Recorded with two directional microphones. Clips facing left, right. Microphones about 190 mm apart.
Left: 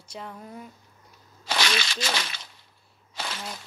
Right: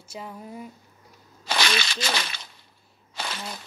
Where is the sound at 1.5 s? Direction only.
60° right (ahead or behind).